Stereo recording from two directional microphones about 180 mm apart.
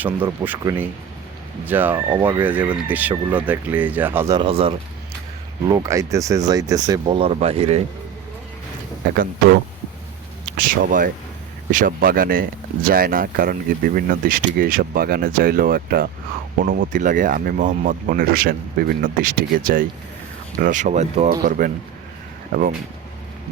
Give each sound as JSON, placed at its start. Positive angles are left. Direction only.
{"t": 0.0, "sound": "speech", "side_deg": -10}
{"t": 4.4, "sound": "speech", "side_deg": -30}
{"t": 5.6, "sound": "speech", "side_deg": -20}
{"t": 10.6, "sound": "speech", "side_deg": -50}
{"t": 21.4, "sound": "speech", "side_deg": -50}